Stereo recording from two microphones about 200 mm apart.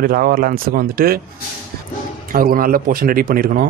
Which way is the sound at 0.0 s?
45° right (ahead or behind).